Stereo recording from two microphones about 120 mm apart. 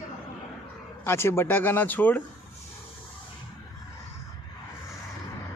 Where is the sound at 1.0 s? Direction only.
20° left (ahead or behind).